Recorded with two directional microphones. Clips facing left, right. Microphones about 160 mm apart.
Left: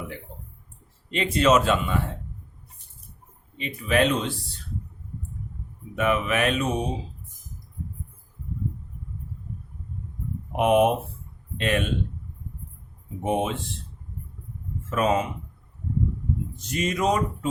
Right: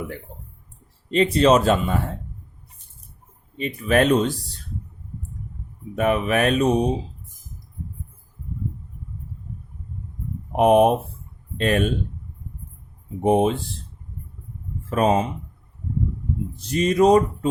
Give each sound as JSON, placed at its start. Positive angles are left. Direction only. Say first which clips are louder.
{"t": 1.1, "sound": "speech", "louder": "right 4 dB", "side_deg": -35}
{"t": 3.6, "sound": "speech", "louder": "right 3 dB", "side_deg": -45}
{"t": 6.0, "sound": "speech", "louder": "right 3 dB", "side_deg": -40}
{"t": 10.5, "sound": "speech", "louder": "right 4 dB", "side_deg": -40}
{"t": 13.2, "sound": "speech", "louder": "right 7 dB", "side_deg": -35}
{"t": 14.8, "sound": "speech", "louder": "right 4 dB", "side_deg": -35}
{"t": 16.6, "sound": "speech", "louder": "right 9 dB", "side_deg": -35}